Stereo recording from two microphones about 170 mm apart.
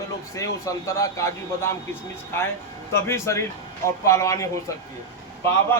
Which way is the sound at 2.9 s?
15° left (ahead or behind).